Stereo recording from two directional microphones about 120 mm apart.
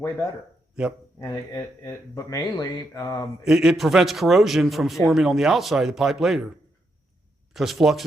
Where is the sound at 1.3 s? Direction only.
30° left (ahead or behind).